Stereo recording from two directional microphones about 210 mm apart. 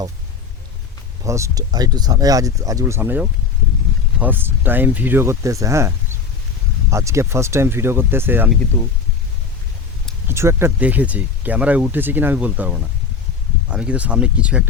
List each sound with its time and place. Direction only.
1.2 s speech: 15° right (ahead or behind)
8.7 s speech: 15° left (ahead or behind)
10.2 s speech: 10° right (ahead or behind)